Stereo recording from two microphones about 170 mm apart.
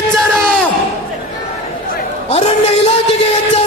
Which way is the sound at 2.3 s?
40° left (ahead or behind).